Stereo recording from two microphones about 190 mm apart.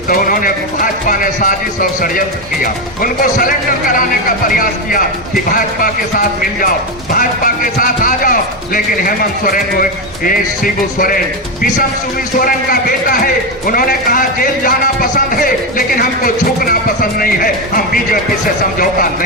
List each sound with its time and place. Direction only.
0.1 s speech: 50° left (ahead or behind)
12.4 s speech: 50° left (ahead or behind)